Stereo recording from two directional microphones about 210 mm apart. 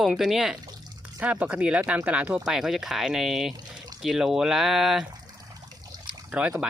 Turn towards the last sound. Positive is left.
turn(degrees=-5)  # may be behind; listen again after turning